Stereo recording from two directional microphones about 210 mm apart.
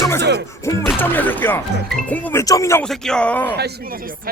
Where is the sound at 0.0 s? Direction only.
10° left (ahead or behind).